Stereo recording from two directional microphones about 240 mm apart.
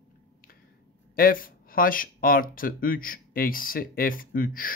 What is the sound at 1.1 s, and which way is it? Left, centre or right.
Speech, left.